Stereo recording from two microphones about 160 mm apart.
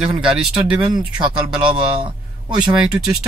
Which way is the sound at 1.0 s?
30° right (ahead or behind).